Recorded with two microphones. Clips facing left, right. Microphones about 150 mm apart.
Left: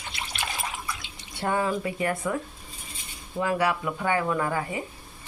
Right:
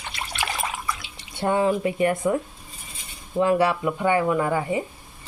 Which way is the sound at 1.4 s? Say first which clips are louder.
Right 5 dB; 20° right (ahead or behind).